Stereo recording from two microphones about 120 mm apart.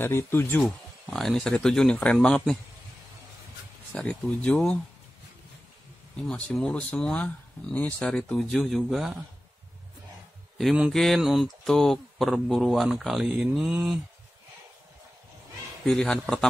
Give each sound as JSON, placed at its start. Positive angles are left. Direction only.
{"t": 0.0, "sound": "speech", "side_deg": 15}
{"t": 0.7, "sound": "speech", "side_deg": 0}
{"t": 4.0, "sound": "speech", "side_deg": 10}
{"t": 6.2, "sound": "speech", "side_deg": 5}
{"t": 10.6, "sound": "speech", "side_deg": 0}
{"t": 15.8, "sound": "speech", "side_deg": 5}